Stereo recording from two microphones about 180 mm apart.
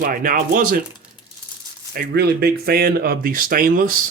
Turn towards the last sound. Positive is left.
turn(degrees=-50)  # may be behind; listen again after turning